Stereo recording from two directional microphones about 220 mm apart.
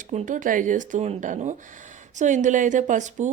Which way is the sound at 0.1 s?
35° right (ahead or behind).